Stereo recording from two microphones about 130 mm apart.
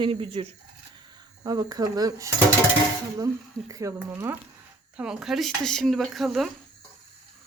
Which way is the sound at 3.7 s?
25° right (ahead or behind).